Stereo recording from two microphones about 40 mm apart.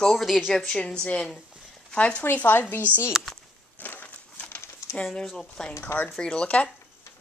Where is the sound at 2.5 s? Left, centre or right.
Left.